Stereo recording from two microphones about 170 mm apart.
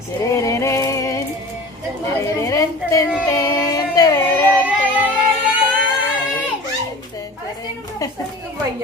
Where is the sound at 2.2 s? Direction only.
20° left (ahead or behind).